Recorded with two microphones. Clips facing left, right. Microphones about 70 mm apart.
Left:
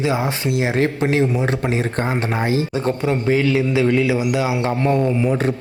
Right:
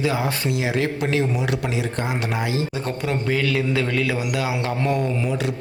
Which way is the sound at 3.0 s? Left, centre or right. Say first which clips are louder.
Left 4 dB; left.